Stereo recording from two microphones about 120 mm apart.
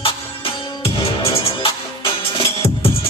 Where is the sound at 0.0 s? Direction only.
50° left (ahead or behind).